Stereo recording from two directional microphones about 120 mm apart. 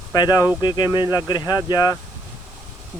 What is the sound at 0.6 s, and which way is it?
Speech, 40° left (ahead or behind).